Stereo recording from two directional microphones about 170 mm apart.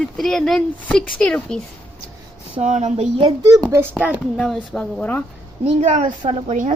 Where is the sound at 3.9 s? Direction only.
10° right (ahead or behind).